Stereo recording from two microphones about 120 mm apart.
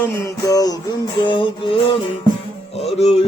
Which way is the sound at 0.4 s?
30° left (ahead or behind).